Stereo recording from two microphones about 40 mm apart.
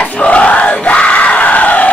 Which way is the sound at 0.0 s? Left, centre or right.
Left.